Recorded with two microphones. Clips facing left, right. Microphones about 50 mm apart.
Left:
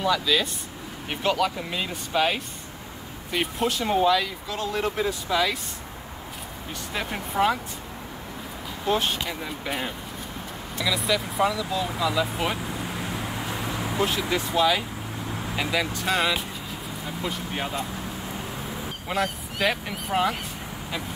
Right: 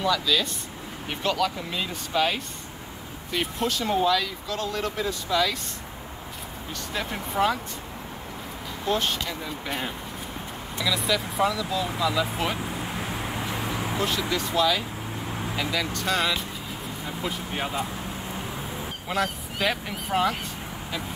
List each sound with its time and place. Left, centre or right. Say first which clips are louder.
0.0 s speech: left 1 dB; centre
6.7 s speech: even; centre
8.8 s speech: left 1 dB; centre
10.8 s speech: left 1 dB; centre
14.0 s speech: left 2 dB; centre
17.2 s speech: even; centre
19.0 s speech: even; centre